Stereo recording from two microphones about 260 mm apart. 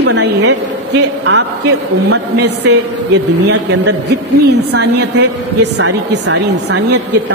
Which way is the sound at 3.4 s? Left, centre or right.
Right.